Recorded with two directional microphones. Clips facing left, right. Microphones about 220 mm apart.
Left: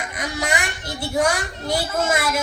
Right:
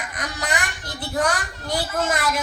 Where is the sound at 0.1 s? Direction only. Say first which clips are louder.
Left 3 dB; 10° left (ahead or behind).